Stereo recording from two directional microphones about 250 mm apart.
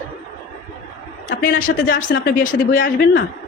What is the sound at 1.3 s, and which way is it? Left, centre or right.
A woman's voice, left.